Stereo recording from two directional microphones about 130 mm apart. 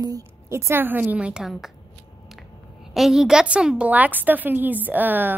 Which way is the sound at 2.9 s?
Centre (ahead or behind).